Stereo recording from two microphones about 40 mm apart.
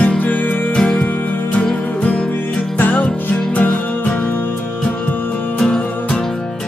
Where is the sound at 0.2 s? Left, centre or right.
Left.